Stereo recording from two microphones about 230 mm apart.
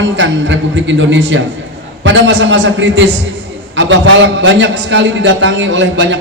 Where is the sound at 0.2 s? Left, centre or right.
Right.